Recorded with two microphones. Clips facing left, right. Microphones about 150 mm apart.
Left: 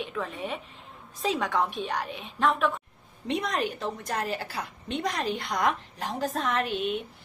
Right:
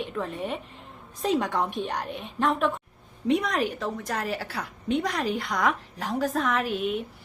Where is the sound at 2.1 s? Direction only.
55° right (ahead or behind).